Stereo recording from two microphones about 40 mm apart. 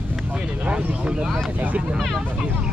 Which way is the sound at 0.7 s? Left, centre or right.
Right.